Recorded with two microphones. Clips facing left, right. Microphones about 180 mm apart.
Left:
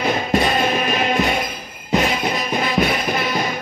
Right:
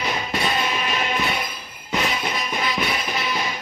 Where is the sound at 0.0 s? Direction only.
45° left (ahead or behind).